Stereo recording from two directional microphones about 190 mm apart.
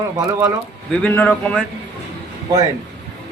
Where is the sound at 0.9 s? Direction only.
5° left (ahead or behind).